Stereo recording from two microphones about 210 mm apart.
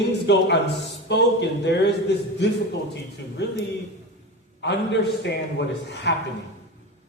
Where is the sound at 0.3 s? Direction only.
55° left (ahead or behind).